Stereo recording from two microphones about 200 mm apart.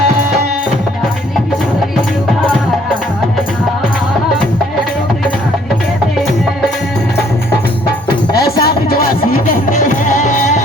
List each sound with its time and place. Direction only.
8.6 s music: 50° left (ahead or behind)